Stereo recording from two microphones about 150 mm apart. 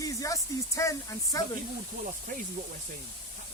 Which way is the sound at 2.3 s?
65° right (ahead or behind).